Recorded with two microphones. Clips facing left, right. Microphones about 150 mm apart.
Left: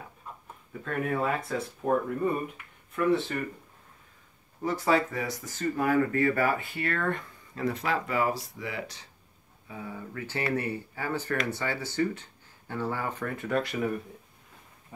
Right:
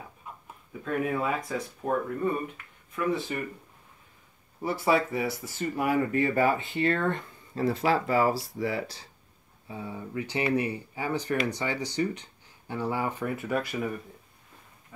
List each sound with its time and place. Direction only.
0.8 s speech: 5° right (ahead or behind)
4.6 s speech: 10° right (ahead or behind)